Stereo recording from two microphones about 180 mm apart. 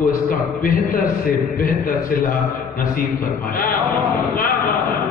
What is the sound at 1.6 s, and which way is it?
A man's voice, 50° left (ahead or behind).